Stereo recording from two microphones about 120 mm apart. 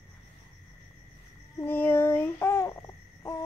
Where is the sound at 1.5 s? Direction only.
15° left (ahead or behind).